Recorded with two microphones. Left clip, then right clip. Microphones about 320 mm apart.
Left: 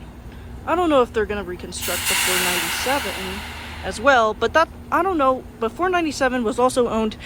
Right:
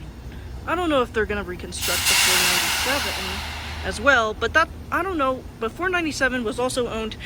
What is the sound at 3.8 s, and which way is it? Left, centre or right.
Speech, centre.